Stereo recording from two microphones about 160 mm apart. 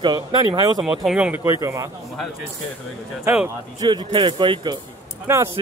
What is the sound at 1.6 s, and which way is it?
Speech, 20° right (ahead or behind).